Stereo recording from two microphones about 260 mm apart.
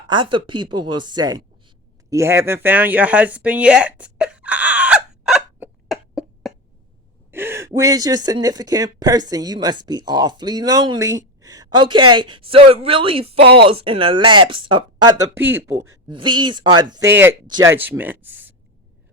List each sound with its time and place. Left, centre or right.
0.1 s a sound: centre
7.3 s speech: centre
13.4 s speech: right
13.8 s speech: centre